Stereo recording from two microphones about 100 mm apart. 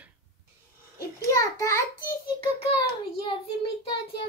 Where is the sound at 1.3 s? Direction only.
35° left (ahead or behind).